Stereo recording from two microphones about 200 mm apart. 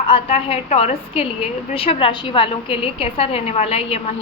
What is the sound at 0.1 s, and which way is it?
A woman's voice, 30° left (ahead or behind).